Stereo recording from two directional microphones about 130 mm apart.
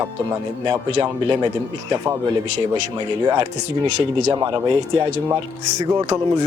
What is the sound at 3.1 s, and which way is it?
Speech, 35° right (ahead or behind).